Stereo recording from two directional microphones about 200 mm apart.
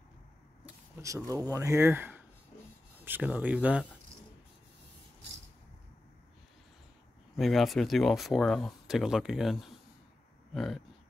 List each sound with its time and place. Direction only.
1.0 s speech: 15° right (ahead or behind)
7.3 s speech: centre (ahead or behind)